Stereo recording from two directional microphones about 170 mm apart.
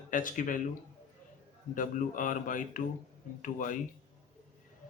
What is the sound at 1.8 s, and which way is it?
Speech, 50° left (ahead or behind).